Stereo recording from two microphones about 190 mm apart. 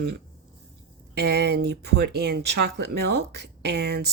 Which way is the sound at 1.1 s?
60° right (ahead or behind).